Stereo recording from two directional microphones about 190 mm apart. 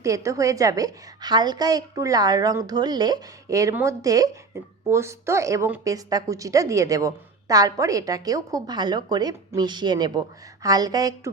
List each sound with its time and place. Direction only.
0.0 s a woman's voice: 15° right (ahead or behind)